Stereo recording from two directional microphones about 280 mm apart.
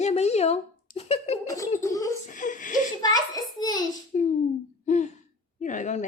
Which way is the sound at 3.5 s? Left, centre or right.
Centre.